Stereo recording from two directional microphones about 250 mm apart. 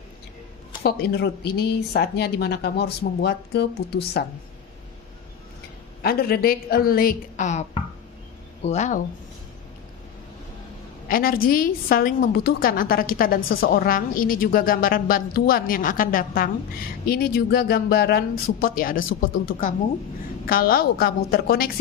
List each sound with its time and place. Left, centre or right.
0.8 s speech: left
6.0 s speech: left
8.6 s speech: left
11.1 s a woman's voice: left